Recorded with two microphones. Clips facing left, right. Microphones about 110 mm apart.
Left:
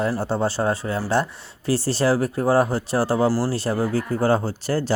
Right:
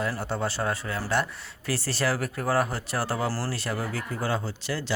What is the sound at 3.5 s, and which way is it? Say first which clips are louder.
Speech: left 9 dB; 30° left (ahead or behind).